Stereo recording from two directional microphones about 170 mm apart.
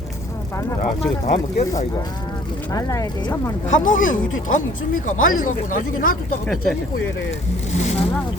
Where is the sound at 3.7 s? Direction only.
50° left (ahead or behind).